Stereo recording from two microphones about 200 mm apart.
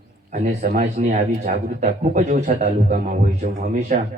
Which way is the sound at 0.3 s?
40° right (ahead or behind).